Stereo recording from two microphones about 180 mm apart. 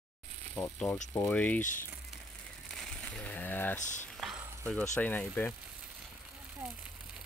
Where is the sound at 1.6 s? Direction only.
45° left (ahead or behind).